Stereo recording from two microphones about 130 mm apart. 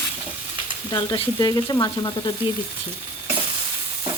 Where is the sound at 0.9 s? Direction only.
30° left (ahead or behind).